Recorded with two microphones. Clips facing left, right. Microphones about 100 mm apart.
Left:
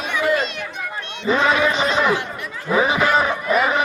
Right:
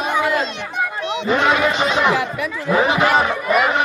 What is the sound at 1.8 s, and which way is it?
Speech, centre (ahead or behind).